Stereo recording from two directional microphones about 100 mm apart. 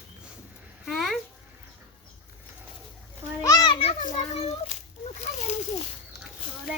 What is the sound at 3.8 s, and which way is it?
Speech, 85° left.